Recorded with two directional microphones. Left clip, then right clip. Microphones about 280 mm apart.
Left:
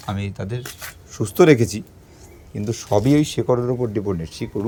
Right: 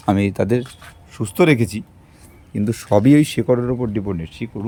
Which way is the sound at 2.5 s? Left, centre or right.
Centre.